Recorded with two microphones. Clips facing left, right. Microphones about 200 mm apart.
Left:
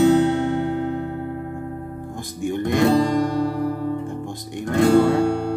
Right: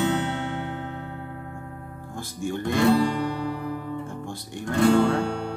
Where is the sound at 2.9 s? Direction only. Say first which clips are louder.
Left 3 dB; 40° left (ahead or behind).